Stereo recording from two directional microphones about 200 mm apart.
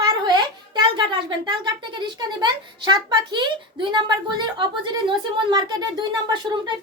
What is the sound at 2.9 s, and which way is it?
Speech, 25° right (ahead or behind).